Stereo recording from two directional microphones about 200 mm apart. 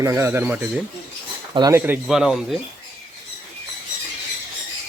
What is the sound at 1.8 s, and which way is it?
Speech, 5° right (ahead or behind).